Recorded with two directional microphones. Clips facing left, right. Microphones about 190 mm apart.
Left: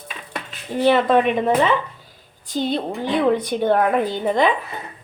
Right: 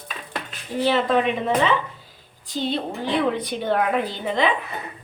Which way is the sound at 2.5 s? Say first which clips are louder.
Left 3 dB; 45° left (ahead or behind).